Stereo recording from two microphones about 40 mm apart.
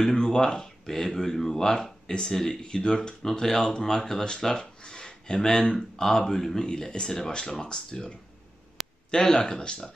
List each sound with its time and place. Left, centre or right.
0.0 s speech: centre
8.8 s a sound: centre
9.1 s speech: centre